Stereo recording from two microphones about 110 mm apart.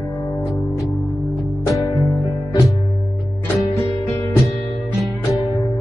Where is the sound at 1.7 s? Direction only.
30° left (ahead or behind).